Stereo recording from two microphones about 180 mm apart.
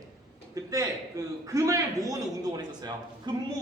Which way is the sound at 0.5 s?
20° right (ahead or behind).